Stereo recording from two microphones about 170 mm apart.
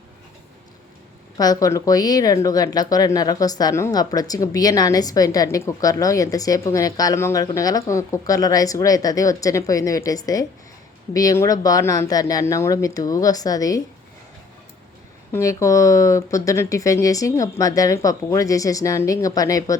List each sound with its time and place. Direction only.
1.4 s speech: 20° left (ahead or behind)
15.3 s speech: 20° left (ahead or behind)